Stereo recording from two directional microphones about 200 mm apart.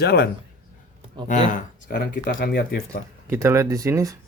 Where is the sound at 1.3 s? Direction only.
40° left (ahead or behind).